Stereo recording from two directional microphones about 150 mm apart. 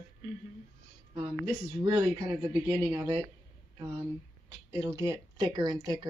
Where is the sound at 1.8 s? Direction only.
30° right (ahead or behind).